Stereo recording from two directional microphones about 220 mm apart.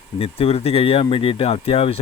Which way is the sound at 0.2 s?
25° left (ahead or behind).